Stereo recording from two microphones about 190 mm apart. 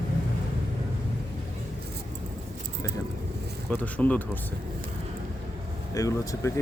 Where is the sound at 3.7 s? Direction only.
10° left (ahead or behind).